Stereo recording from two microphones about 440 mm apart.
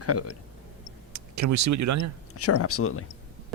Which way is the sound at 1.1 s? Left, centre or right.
Right.